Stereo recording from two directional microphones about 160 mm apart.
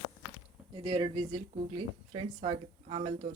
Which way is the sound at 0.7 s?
35° right (ahead or behind).